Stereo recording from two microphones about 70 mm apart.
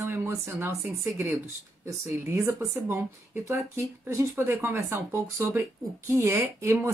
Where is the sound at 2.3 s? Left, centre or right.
Right.